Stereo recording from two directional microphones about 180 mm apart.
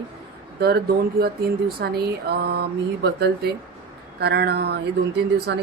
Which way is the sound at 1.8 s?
60° right (ahead or behind).